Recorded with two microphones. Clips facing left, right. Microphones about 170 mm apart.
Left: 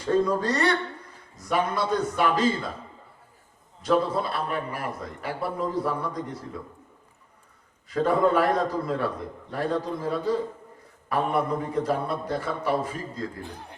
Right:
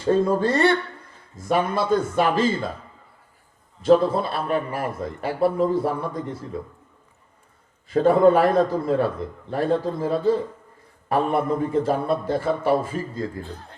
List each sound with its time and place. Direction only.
0.0 s a man's voice: 25° right (ahead or behind)
3.8 s a man's voice: 25° right (ahead or behind)
7.9 s a man's voice: 25° right (ahead or behind)
13.4 s speech: 15° left (ahead or behind)